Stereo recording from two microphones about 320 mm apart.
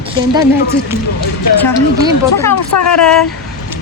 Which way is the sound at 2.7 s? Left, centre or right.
Left.